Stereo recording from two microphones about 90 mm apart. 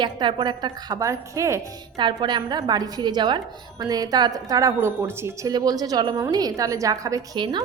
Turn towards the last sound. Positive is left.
turn(degrees=-55)  # may be behind; listen again after turning